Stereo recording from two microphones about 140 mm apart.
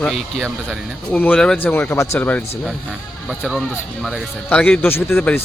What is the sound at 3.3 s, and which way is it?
Speech, centre (ahead or behind).